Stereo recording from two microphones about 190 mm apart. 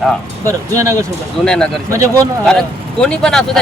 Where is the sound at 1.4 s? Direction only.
5° left (ahead or behind).